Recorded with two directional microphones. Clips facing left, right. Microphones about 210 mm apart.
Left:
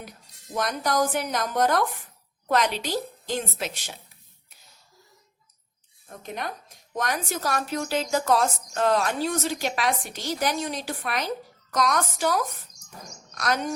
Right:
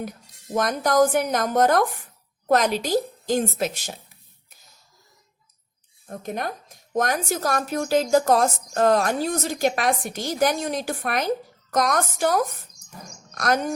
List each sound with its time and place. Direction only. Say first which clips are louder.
0.5 s a woman's voice: right 5 dB; 45° right (ahead or behind)
6.1 s a woman's voice: right 5 dB; 45° right (ahead or behind)